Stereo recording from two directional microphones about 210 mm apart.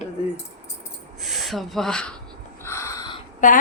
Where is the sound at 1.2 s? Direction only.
Centre (ahead or behind).